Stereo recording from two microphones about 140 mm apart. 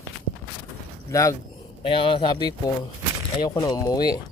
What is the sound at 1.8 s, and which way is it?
Speech, 40° left (ahead or behind).